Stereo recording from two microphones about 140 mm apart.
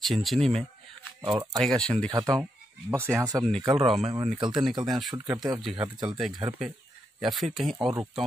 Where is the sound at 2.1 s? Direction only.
25° right (ahead or behind).